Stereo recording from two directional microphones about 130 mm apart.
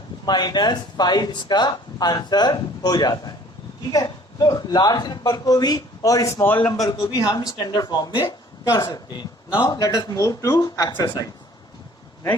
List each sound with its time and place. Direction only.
0.3 s a man's voice: 35° left (ahead or behind); by 6.7 s 15° left (ahead or behind)
6.8 s a man's voice: 25° left (ahead or behind)